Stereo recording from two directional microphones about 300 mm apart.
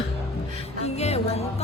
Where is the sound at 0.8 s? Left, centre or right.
Left.